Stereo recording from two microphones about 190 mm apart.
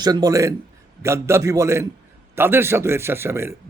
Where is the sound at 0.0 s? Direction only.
20° right (ahead or behind).